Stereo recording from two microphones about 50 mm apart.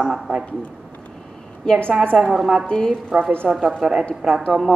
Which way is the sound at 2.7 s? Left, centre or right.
Centre.